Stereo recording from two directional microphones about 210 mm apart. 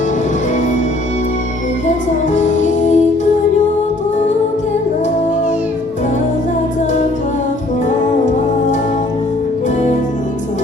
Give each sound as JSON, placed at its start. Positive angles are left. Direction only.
{"t": 2.3, "sound": "music", "side_deg": 35}